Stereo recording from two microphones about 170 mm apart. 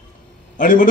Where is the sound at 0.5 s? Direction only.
55° left (ahead or behind).